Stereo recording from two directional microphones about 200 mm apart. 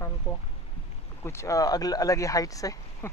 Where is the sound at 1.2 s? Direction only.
15° left (ahead or behind).